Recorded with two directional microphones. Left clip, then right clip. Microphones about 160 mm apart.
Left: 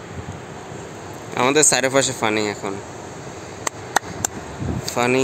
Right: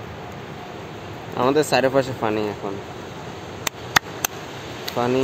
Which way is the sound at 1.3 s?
30° left (ahead or behind).